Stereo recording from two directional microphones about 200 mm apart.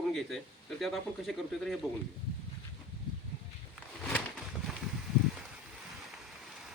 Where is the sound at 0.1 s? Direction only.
Centre (ahead or behind).